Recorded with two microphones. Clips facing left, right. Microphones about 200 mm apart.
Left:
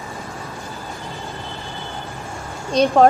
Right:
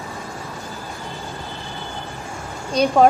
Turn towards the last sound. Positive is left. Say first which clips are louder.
# left 1 dB
turn(degrees=0)  # may be behind; listen again after turning